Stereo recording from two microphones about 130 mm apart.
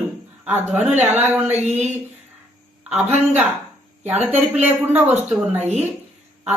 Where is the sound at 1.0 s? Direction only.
15° right (ahead or behind).